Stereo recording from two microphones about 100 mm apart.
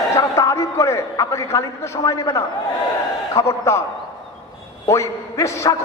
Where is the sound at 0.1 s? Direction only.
30° left (ahead or behind).